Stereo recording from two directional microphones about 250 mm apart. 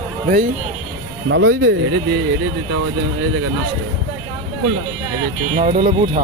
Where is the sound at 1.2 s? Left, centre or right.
Right.